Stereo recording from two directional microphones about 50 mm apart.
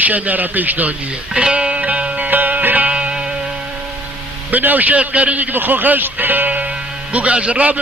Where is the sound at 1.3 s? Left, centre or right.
Centre; by 2.9 s right.